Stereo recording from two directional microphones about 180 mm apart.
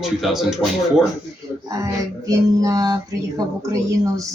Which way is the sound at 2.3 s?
20° right (ahead or behind).